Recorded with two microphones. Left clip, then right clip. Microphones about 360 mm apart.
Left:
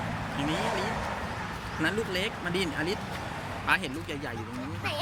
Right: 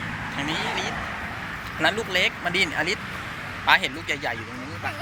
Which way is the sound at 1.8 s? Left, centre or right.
Centre.